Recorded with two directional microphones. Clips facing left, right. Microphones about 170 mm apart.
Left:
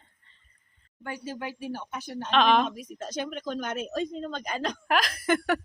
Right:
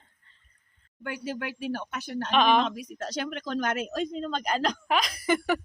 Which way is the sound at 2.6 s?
80° right.